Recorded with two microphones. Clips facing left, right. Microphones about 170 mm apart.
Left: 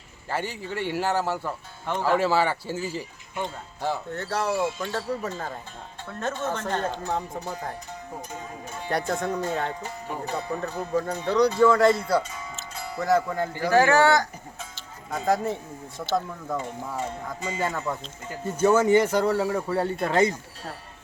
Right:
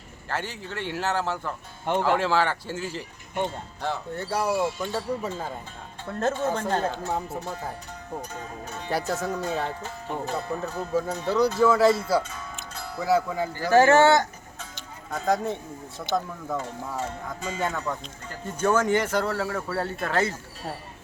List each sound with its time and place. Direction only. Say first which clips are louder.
0.3 s speech: left 2 dB; 10° left (ahead or behind)
4.1 s speech: right 4 dB; 10° right (ahead or behind)
6.1 s speech: right 6 dB; 40° right (ahead or behind)
6.5 s speech: right 2 dB; 10° right (ahead or behind)
8.9 s speech: left 1 dB; 5° right (ahead or behind)
9.8 s speech: right 1 dB; 15° left (ahead or behind)
10.3 s speech: left 3 dB; centre (ahead or behind)
13.7 s speech: right 2 dB; 25° right (ahead or behind)
15.1 s speech: left 1 dB; centre (ahead or behind)